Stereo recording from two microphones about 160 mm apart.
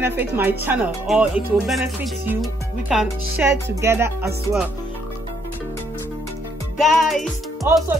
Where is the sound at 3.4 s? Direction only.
15° right (ahead or behind).